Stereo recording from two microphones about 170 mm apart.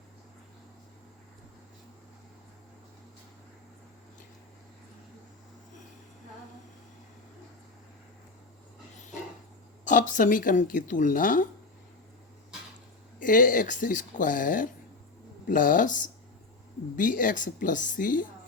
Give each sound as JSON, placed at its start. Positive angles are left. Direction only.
{"t": 9.8, "sound": "speech", "side_deg": 50}
{"t": 13.1, "sound": "speech", "side_deg": 50}